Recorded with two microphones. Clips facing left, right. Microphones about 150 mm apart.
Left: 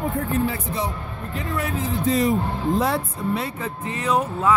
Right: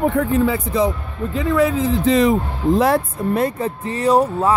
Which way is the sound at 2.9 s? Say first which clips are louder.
Right 6 dB; 50° right (ahead or behind).